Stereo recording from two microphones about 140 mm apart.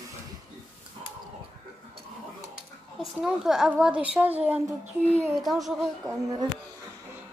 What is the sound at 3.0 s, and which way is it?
A woman's voice, 5° right (ahead or behind).